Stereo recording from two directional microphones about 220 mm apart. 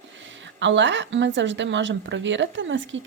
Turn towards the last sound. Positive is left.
turn(degrees=-60)  # may be behind; listen again after turning